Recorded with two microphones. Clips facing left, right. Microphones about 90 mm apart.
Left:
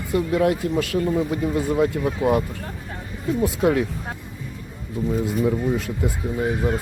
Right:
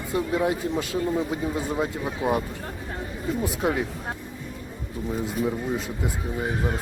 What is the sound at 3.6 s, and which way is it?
Speech, 15° right (ahead or behind).